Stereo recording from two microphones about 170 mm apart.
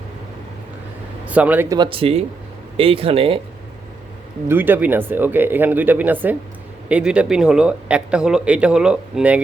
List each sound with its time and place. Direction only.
1.3 s speech: 10° right (ahead or behind)
1.7 s speech: 30° right (ahead or behind)
4.4 s speech: 10° right (ahead or behind)